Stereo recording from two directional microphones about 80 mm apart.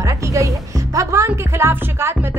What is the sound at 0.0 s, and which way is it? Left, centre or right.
A woman's voice, right.